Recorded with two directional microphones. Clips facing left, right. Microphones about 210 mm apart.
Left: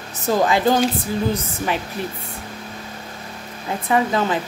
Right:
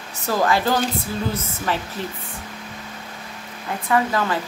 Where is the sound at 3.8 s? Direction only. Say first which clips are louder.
Left 2 dB; 20° left (ahead or behind).